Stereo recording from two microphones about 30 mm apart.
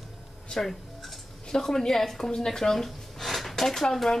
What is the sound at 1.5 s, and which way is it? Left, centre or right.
Speech, centre.